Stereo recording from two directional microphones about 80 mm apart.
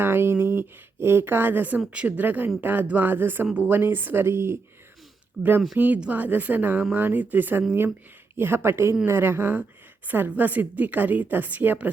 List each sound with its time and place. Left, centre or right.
0.0 s speech: right